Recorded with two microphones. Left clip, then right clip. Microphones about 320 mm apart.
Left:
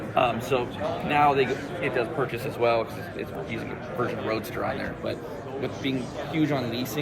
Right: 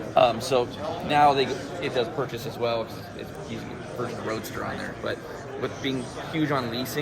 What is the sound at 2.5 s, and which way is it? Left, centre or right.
Speech, centre.